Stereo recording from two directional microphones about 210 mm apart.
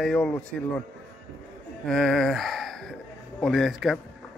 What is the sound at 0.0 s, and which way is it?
Speech, 5° left (ahead or behind).